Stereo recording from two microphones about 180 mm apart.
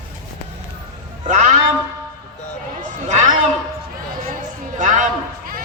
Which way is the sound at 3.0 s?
40° right (ahead or behind).